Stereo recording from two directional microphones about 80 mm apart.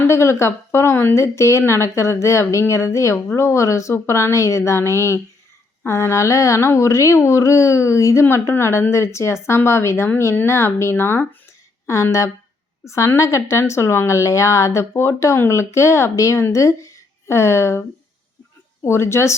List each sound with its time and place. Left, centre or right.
0.0 s a woman's voice: left
12.8 s a woman's voice: left